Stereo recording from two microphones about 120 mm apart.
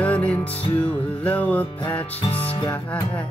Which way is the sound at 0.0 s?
10° left (ahead or behind).